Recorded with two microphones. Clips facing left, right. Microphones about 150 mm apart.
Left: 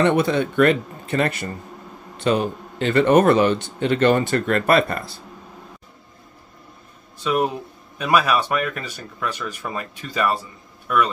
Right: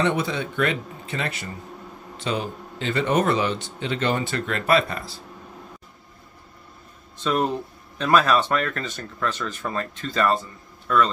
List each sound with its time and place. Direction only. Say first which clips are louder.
0.0 s a man's voice: left 6 dB; 55° left (ahead or behind)
7.2 s speech: left 2 dB; 10° left (ahead or behind)